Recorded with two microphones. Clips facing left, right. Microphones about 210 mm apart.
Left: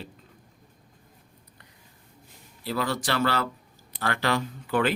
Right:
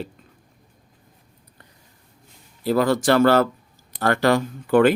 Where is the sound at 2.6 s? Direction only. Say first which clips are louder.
Right 10 dB; 50° right (ahead or behind).